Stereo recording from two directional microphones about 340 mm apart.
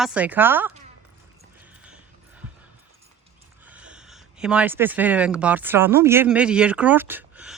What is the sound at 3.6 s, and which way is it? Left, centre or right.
Speech, centre.